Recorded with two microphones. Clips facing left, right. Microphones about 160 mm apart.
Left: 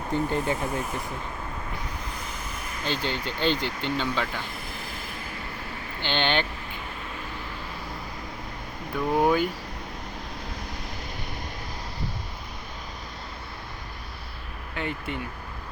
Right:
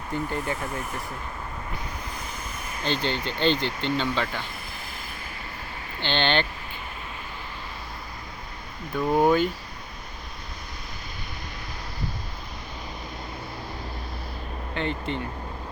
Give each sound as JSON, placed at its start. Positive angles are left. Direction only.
{"t": 0.1, "sound": "speech", "side_deg": 20}
{"t": 2.8, "sound": "speech", "side_deg": 5}
{"t": 6.0, "sound": "speech", "side_deg": 10}
{"t": 9.1, "sound": "speech", "side_deg": 10}
{"t": 14.8, "sound": "speech", "side_deg": 10}